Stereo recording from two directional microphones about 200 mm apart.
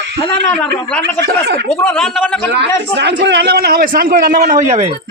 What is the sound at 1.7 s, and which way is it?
Speech, 10° left (ahead or behind).